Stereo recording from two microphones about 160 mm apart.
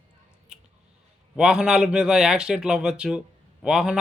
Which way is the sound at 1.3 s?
5° right (ahead or behind).